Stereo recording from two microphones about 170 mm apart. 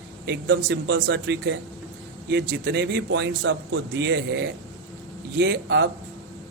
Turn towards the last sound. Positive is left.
turn(degrees=-90)